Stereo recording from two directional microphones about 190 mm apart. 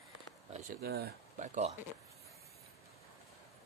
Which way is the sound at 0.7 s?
55° right (ahead or behind).